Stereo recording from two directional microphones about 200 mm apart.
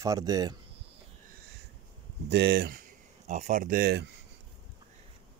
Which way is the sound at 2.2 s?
55° right (ahead or behind).